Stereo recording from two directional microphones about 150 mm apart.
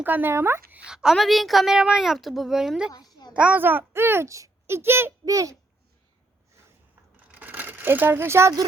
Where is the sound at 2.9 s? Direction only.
30° left (ahead or behind).